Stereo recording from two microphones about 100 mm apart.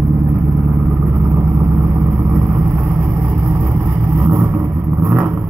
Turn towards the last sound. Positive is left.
turn(degrees=-15)  # may be behind; listen again after turning